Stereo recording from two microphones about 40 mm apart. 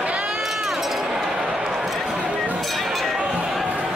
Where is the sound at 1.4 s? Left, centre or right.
Right.